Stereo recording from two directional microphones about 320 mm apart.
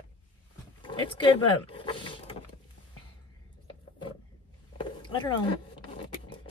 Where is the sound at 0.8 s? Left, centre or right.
Centre.